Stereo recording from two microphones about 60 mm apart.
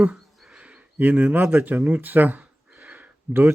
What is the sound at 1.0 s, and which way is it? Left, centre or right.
Speech, right.